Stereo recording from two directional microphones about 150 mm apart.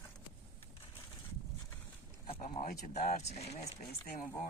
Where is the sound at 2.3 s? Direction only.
40° left (ahead or behind).